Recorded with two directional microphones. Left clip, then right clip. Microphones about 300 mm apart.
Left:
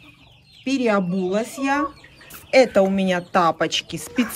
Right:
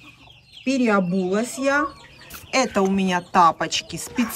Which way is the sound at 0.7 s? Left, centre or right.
Centre.